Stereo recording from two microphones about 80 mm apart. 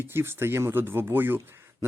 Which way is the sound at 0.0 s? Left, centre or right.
Right.